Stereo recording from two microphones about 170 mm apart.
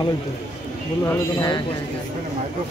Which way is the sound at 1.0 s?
25° left (ahead or behind).